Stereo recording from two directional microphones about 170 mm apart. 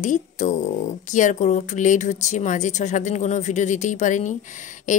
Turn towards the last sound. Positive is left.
turn(degrees=45)  # may be behind; listen again after turning